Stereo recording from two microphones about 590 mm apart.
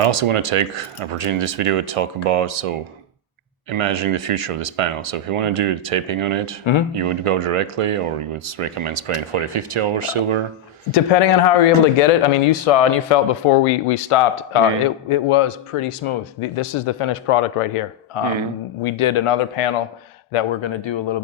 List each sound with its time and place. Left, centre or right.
0.0 s speech: right
3.8 s speech: right
10.9 s speech: left
20.3 s speech: left